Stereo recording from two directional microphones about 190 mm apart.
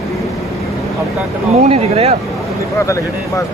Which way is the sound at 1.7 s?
30° right (ahead or behind).